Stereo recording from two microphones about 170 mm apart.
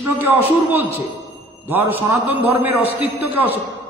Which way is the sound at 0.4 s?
35° left (ahead or behind).